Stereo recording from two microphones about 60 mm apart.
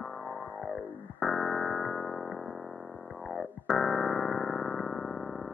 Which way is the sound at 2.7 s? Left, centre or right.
Centre.